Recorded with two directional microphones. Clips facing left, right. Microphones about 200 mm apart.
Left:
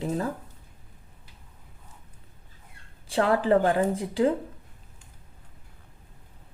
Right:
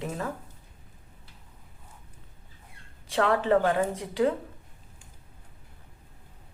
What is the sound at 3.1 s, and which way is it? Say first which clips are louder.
Speech: left 2 dB; 35° left (ahead or behind).